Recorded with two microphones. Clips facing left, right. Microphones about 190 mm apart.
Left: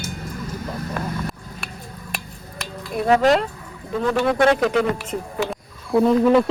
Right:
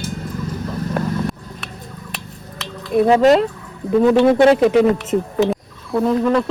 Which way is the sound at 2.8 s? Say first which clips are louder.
Right 10 dB; centre (ahead or behind).